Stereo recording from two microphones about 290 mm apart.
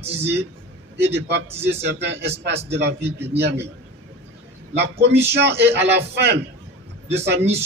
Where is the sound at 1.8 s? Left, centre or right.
Right.